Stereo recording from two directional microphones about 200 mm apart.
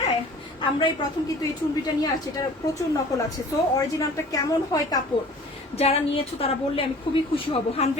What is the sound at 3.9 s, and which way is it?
A woman's voice, 15° left (ahead or behind).